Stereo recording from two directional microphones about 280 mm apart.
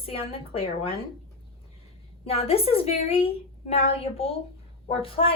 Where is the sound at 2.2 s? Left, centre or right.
Left.